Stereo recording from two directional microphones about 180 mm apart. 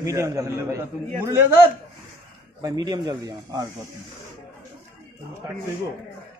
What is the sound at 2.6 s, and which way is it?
Speech, 20° right (ahead or behind).